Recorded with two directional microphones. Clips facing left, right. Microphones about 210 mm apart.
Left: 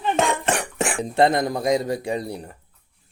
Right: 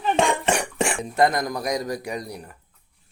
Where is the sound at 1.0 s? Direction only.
30° left (ahead or behind).